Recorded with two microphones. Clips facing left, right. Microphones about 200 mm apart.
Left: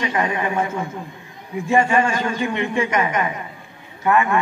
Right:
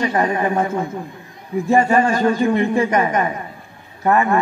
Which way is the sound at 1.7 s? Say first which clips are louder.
Right 2 dB; 35° right (ahead or behind).